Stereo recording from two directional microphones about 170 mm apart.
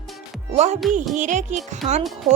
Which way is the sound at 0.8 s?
Centre (ahead or behind).